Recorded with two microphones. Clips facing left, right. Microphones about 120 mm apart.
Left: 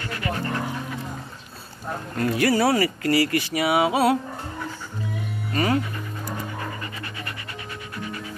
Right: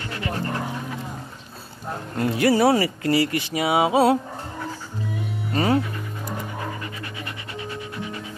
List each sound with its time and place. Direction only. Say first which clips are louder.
0.0 s dog: even; 25° right (ahead or behind)
2.1 s speech: right 2 dB; 20° right (ahead or behind)
5.5 s speech: right 2 dB; 25° right (ahead or behind)
6.8 s pant: right 1 dB; 5° right (ahead or behind)
7.2 s pant: right 3 dB; 20° right (ahead or behind)